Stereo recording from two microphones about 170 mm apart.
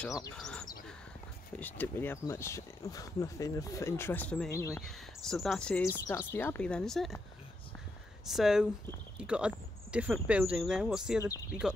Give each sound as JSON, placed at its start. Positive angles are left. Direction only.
{"t": 0.4, "sound": "speech", "side_deg": 5}
{"t": 4.8, "sound": "speech", "side_deg": 0}
{"t": 8.3, "sound": "speech", "side_deg": 0}